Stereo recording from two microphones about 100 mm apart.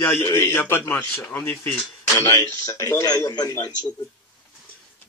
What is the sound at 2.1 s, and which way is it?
A man's voice, 30° left (ahead or behind).